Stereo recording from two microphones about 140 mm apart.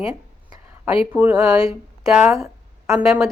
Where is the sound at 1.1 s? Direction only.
10° right (ahead or behind).